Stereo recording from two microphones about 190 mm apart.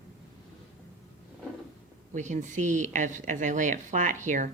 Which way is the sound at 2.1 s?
40° right (ahead or behind).